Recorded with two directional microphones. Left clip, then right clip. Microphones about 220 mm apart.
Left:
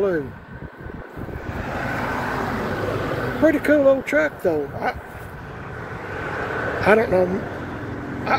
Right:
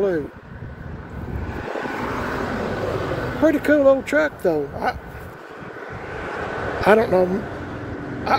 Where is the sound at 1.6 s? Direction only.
40° left (ahead or behind).